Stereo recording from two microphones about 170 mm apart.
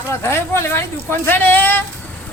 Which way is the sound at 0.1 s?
15° left (ahead or behind).